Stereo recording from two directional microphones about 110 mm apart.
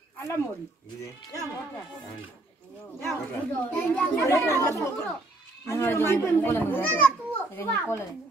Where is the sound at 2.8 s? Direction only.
20° left (ahead or behind).